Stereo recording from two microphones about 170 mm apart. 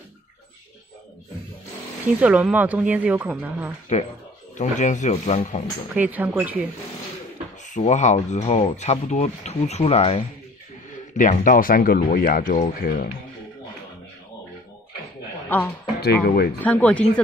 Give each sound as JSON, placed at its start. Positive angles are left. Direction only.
{"t": 2.1, "sound": "speech", "side_deg": -10}
{"t": 4.6, "sound": "speech", "side_deg": 45}
{"t": 5.9, "sound": "speech", "side_deg": -10}
{"t": 7.7, "sound": "speech", "side_deg": 45}
{"t": 11.1, "sound": "speech", "side_deg": 50}
{"t": 12.8, "sound": "speech", "side_deg": 60}
{"t": 15.4, "sound": "a sound", "side_deg": 10}
{"t": 16.0, "sound": "speech", "side_deg": 65}
{"t": 16.6, "sound": "speech", "side_deg": 10}